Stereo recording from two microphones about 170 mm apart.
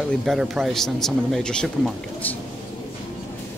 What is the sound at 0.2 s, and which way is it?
Speech, centre (ahead or behind).